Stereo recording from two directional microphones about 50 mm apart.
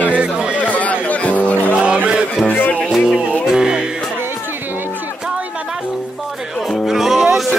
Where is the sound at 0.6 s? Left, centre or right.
Left.